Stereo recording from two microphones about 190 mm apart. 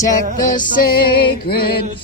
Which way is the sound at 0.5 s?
50° left (ahead or behind).